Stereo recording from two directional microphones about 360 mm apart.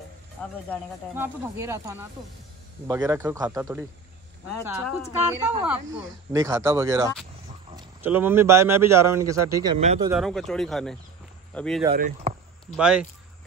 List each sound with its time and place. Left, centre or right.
0.7 s a man's voice: centre
10.2 s speech: centre
11.9 s speech: right
12.7 s speech: centre